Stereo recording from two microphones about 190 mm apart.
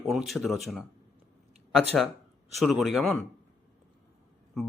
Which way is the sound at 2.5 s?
Centre (ahead or behind).